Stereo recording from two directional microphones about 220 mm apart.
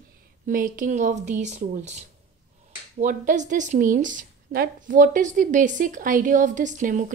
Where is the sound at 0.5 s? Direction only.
40° right (ahead or behind).